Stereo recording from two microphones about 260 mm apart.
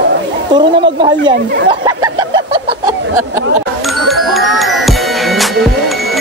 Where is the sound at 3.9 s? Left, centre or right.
Centre.